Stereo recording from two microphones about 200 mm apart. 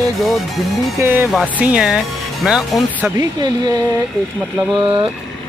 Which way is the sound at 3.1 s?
20° right (ahead or behind).